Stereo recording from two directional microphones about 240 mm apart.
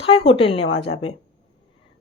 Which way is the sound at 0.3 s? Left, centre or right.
Left.